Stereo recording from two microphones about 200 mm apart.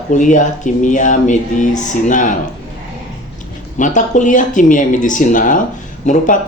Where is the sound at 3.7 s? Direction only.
40° left (ahead or behind).